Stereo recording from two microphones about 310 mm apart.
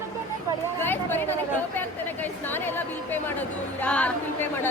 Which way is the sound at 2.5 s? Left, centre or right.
Centre.